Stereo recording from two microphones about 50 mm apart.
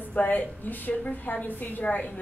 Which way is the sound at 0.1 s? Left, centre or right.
Left.